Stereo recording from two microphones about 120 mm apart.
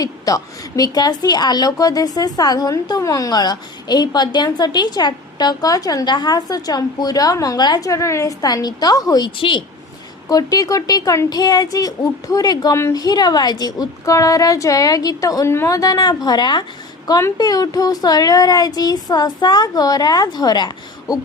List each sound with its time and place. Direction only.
0.0 s a woman's voice: 30° left (ahead or behind)